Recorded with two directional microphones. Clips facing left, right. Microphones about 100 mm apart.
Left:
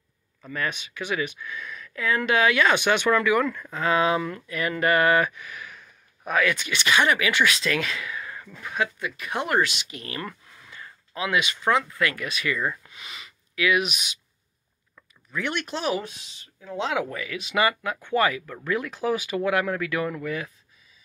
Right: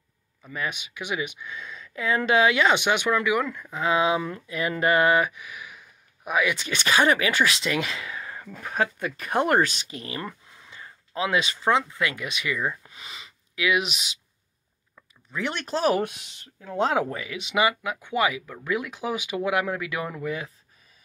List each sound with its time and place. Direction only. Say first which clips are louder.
0.4 s speech: left 2 dB; 10° right (ahead or behind)
6.7 s speech: right 2 dB; 40° right (ahead or behind)
8.5 s speech: right 2 dB; 40° right (ahead or behind); by 12.7 s 15° right (ahead or behind)
12.8 s a sound: even; 30° right (ahead or behind)
15.3 s speech: right 1 dB; 30° right (ahead or behind)
16.0 s speech: right 7 dB; 60° right (ahead or behind); by 17.1 s 40° right (ahead or behind)
17.1 s speech: even; 25° right (ahead or behind)